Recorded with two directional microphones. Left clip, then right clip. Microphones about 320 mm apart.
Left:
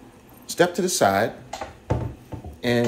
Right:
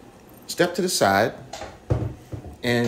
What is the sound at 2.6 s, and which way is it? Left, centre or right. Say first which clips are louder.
Speech: even; centre.